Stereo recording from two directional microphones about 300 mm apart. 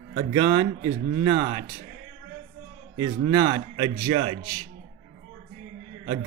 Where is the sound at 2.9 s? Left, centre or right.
Centre.